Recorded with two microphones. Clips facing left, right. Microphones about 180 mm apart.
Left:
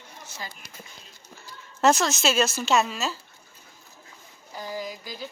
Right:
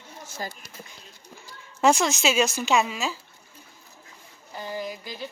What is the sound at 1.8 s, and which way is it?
A woman's voice, 10° right (ahead or behind).